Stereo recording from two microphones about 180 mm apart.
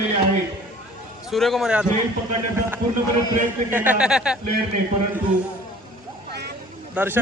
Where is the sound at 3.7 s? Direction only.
10° right (ahead or behind).